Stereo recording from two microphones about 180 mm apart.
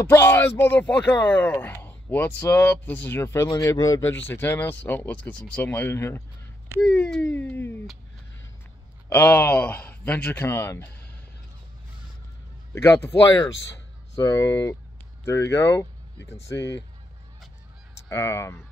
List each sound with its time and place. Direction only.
0.0 s speech: 15° left (ahead or behind)
9.1 s speech: 10° left (ahead or behind)
12.7 s speech: 15° left (ahead or behind)
14.1 s speech: 15° left (ahead or behind)
16.5 s speech: 80° left
18.0 s speech: 15° left (ahead or behind)